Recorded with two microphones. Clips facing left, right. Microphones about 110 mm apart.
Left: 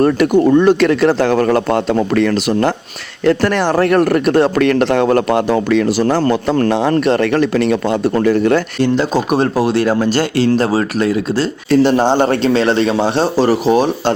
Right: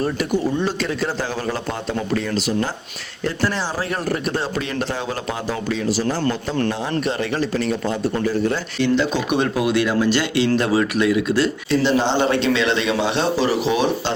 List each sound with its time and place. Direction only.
0.0 s speech: 60° left (ahead or behind)
6.7 s speech: 75° left (ahead or behind)
8.8 s speech: 40° left (ahead or behind)